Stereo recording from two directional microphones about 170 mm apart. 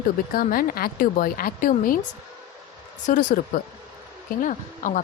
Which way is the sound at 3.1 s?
50° left (ahead or behind).